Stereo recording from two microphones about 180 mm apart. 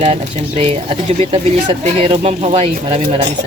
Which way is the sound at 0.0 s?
35° right (ahead or behind).